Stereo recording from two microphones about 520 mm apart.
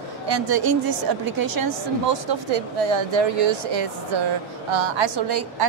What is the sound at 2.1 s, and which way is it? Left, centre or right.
A woman's voice, right.